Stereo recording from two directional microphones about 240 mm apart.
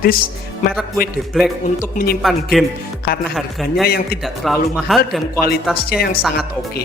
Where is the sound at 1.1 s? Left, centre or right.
Centre.